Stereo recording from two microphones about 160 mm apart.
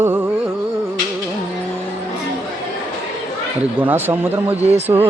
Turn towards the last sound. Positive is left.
turn(degrees=-25)  # may be behind; listen again after turning